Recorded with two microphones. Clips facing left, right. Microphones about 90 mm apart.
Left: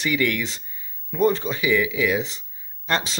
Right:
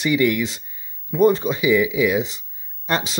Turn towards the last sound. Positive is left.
turn(degrees=-10)  # may be behind; listen again after turning